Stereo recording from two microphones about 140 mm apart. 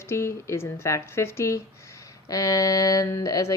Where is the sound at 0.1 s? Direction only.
20° left (ahead or behind).